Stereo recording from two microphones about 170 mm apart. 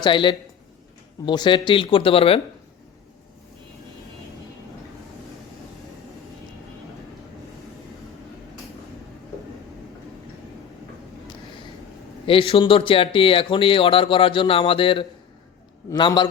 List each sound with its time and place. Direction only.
0.0 s speech: 30° left (ahead or behind)
12.2 s speech: 30° left (ahead or behind)